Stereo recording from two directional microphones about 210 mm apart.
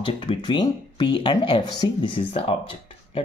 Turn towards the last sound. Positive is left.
turn(degrees=25)  # may be behind; listen again after turning